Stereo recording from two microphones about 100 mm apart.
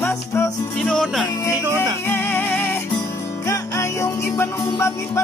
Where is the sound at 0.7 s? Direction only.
10° left (ahead or behind).